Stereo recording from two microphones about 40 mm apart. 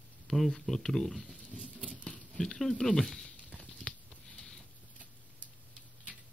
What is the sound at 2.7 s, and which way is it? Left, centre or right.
Speech, centre.